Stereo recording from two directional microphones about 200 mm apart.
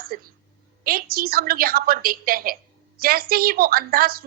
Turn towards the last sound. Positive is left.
turn(degrees=-50)  # may be behind; listen again after turning